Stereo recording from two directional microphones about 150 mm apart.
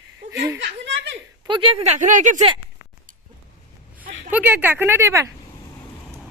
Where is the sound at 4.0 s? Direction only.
70° right (ahead or behind).